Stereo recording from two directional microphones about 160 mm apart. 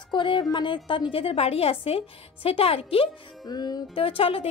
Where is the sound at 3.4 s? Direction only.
25° left (ahead or behind).